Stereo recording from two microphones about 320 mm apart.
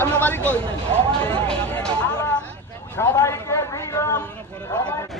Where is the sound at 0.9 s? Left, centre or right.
Centre.